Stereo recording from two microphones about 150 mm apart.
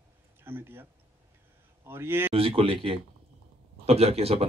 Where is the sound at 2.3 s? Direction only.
40° right (ahead or behind).